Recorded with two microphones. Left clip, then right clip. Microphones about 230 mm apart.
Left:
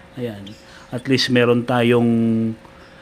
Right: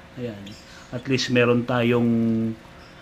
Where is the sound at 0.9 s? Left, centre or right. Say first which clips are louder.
Left 5 dB; left.